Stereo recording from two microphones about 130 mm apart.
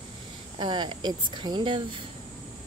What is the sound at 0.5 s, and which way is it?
Speech, 35° right (ahead or behind).